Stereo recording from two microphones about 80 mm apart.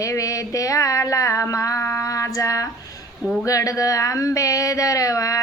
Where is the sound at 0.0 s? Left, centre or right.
Left.